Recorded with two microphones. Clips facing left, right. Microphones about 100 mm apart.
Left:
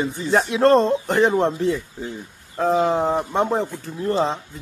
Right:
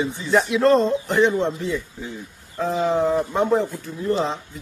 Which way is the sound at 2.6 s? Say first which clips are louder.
Left 2 dB; 40° left (ahead or behind).